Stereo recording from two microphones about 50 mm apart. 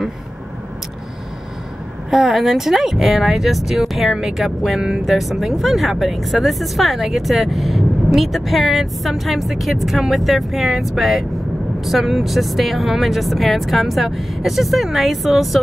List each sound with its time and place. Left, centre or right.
2.0 s speech: centre